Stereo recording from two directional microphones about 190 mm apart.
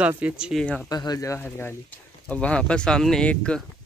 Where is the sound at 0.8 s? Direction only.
20° left (ahead or behind).